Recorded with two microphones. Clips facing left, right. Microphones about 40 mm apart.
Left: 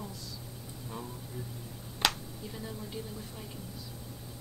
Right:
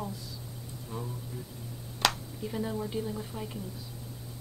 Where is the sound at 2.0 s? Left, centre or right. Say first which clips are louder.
Right 2 dB; centre.